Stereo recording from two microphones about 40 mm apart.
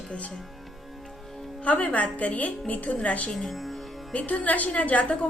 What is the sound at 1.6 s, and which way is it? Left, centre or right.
A woman's voice, left.